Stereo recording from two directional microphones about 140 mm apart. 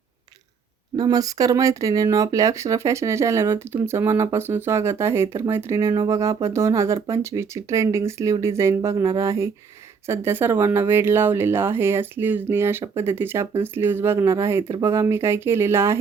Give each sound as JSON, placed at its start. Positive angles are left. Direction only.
{"t": 0.9, "sound": "speech", "side_deg": -25}